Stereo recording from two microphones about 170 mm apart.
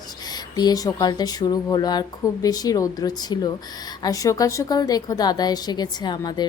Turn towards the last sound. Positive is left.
turn(degrees=25)  # may be behind; listen again after turning